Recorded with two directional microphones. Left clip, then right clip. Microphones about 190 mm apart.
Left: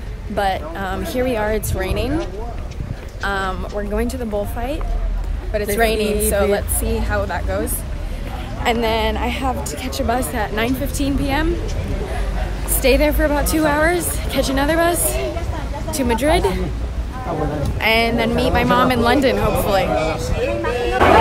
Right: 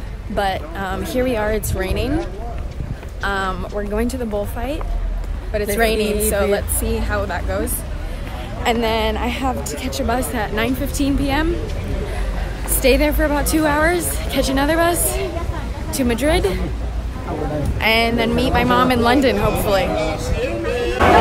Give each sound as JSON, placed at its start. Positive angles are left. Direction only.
{"t": 0.4, "sound": "speech", "side_deg": 5}
{"t": 3.2, "sound": "speech", "side_deg": 0}
{"t": 8.6, "sound": "speech", "side_deg": 5}
{"t": 12.8, "sound": "speech", "side_deg": 5}
{"t": 17.7, "sound": "speech", "side_deg": 0}
{"t": 20.0, "sound": "a sound", "side_deg": 40}